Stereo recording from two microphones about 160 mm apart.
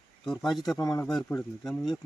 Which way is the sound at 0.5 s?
Centre (ahead or behind).